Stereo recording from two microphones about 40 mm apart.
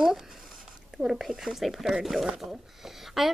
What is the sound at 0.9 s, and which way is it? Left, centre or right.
Speech, centre.